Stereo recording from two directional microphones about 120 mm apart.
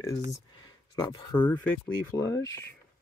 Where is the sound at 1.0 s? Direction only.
35° left (ahead or behind).